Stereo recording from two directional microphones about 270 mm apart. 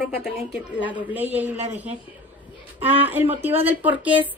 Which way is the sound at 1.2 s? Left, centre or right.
Right.